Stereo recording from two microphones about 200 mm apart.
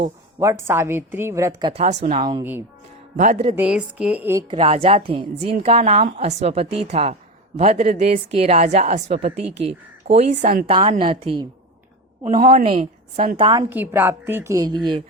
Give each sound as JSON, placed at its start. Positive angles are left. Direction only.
{"t": 0.3, "sound": "a woman's voice", "side_deg": -15}
{"t": 1.8, "sound": "a woman's voice", "side_deg": -35}
{"t": 2.4, "sound": "a woman's voice", "side_deg": -10}
{"t": 3.2, "sound": "a woman's voice", "side_deg": -35}
{"t": 3.5, "sound": "a woman's voice", "side_deg": -5}
{"t": 4.4, "sound": "a woman's voice", "side_deg": -30}
{"t": 10.7, "sound": "a woman's voice", "side_deg": -25}
{"t": 12.2, "sound": "a woman's voice", "side_deg": -40}